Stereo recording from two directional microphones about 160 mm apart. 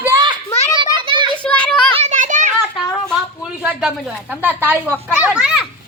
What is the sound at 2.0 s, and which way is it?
Children playing, 50° right (ahead or behind).